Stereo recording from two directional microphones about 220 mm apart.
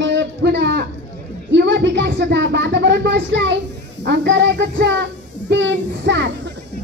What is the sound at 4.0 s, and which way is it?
Child singing, 50° right (ahead or behind).